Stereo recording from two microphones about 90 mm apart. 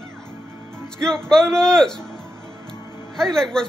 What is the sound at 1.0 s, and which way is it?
Speech, 5° left (ahead or behind).